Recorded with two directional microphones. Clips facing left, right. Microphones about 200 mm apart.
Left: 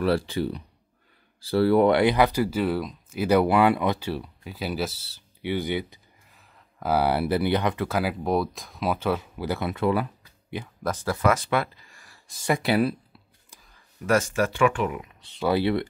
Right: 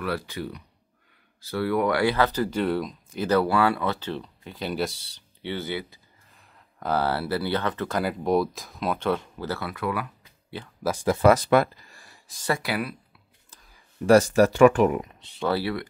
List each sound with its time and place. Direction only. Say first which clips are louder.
0.0 s speech: left 6 dB; 30° left (ahead or behind)
6.3 s speech: right 1 dB; centre (ahead or behind)
9.5 s speech: left 5 dB; 20° left (ahead or behind)
10.8 s speech: right 3 dB; 10° right (ahead or behind)
11.1 s speech: right 5 dB; 30° right (ahead or behind)
12.4 s speech: left 5 dB; 20° left (ahead or behind)
14.0 s speech: right 6 dB; 35° right (ahead or behind)
15.4 s speech: left 3 dB; 20° left (ahead or behind)